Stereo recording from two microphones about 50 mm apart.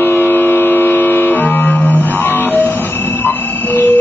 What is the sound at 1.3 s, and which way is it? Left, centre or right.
Music, left.